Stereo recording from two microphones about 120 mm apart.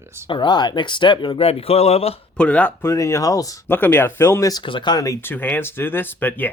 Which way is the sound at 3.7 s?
15° left (ahead or behind).